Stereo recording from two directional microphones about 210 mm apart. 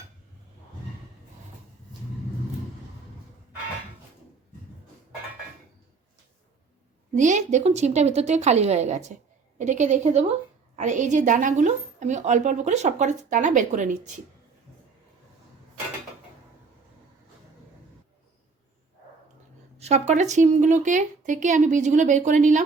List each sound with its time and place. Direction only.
7.1 s a woman's voice: 35° right (ahead or behind)
19.8 s a woman's voice: 30° right (ahead or behind)